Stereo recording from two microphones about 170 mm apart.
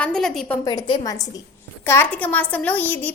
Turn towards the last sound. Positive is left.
turn(degrees=10)  # may be behind; listen again after turning